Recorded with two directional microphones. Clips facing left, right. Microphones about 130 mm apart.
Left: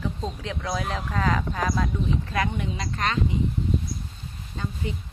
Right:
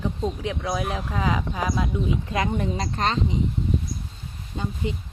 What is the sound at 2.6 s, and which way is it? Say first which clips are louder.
Speech: right 3 dB; 35° right (ahead or behind).